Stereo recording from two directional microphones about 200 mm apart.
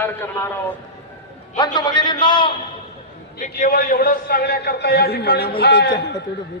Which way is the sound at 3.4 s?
40° left (ahead or behind).